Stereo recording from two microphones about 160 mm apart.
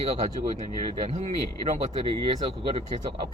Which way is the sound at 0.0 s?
45° right (ahead or behind).